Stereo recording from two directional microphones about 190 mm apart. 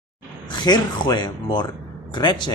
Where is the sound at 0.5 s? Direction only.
25° left (ahead or behind).